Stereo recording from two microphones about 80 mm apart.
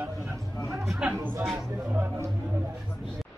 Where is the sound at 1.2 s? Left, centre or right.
Right.